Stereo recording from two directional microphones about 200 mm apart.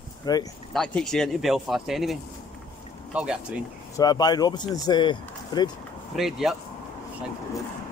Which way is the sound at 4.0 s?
20° left (ahead or behind).